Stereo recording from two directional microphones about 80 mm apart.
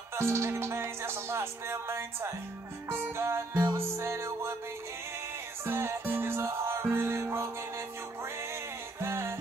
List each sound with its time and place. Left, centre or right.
0.1 s music: right
5.7 s music: right
9.0 s music: right